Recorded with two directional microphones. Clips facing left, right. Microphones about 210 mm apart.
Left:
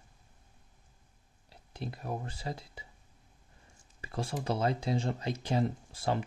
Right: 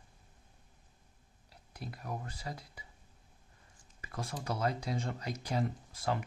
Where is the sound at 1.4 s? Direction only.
25° left (ahead or behind).